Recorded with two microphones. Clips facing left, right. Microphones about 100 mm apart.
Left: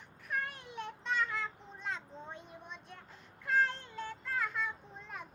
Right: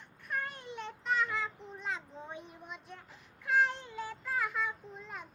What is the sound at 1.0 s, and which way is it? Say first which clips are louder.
Child singing: right 3 dB; centre (ahead or behind).